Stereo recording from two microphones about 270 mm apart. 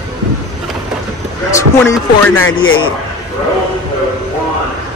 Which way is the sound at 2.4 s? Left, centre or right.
Left.